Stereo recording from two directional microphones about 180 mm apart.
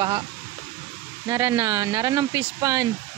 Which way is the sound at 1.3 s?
20° right (ahead or behind).